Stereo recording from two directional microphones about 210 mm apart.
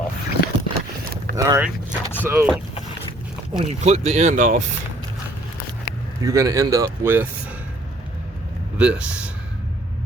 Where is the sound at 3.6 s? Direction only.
30° right (ahead or behind).